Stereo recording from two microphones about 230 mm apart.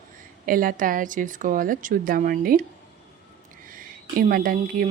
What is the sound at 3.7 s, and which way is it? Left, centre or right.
Speech, right.